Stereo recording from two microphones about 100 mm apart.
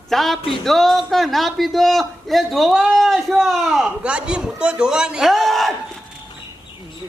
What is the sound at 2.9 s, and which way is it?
A man's voice, centre (ahead or behind).